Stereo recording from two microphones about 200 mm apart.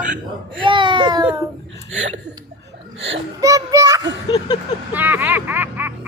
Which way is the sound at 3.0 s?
70° right (ahead or behind).